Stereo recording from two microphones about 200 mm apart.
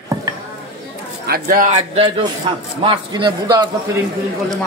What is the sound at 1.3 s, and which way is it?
A man's voice, 45° right (ahead or behind).